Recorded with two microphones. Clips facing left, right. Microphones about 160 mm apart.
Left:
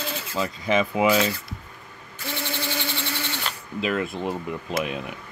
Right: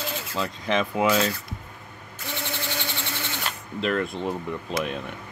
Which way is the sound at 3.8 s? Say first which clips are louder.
Even; 5° left (ahead or behind).